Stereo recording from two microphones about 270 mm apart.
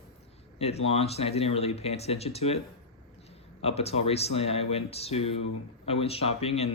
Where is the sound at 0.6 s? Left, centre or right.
Left.